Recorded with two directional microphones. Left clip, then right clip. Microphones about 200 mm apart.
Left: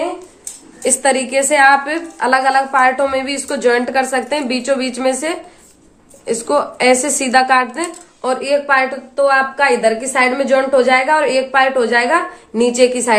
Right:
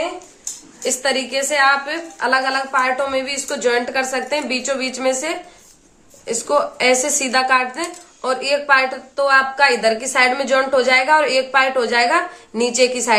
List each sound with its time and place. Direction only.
0.9 s a woman's voice: 30° left (ahead or behind); by 13.1 s 15° left (ahead or behind)